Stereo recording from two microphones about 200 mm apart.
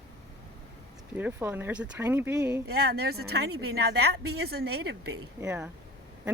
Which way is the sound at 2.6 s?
50° right (ahead or behind).